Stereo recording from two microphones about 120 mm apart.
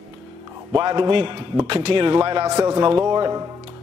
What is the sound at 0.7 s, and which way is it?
A man's voice, 35° right (ahead or behind).